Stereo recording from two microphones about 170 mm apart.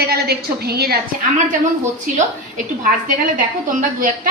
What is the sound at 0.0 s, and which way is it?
Speech, 65° right (ahead or behind).